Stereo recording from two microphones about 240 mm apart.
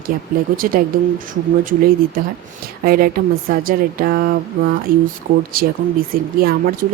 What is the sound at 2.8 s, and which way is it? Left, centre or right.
Speech, right.